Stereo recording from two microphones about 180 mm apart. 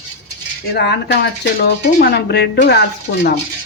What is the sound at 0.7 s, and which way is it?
Speech, 70° left (ahead or behind).